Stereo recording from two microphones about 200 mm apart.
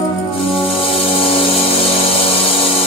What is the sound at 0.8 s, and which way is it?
Music, 30° left (ahead or behind).